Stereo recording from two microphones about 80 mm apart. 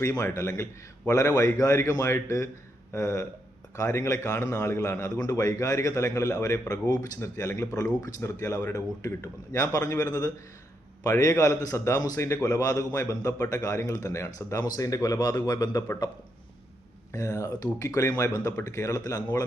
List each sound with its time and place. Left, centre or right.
0.0 s a man's voice: left
7.2 s a man's voice: left
17.1 s a man's voice: left